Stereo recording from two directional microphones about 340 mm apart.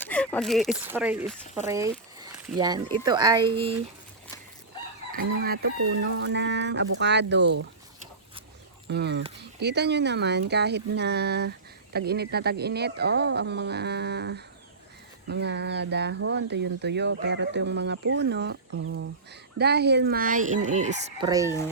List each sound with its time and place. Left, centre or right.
0.0 s speech: centre
5.1 s speech: right
8.9 s speech: right; by 21.6 s centre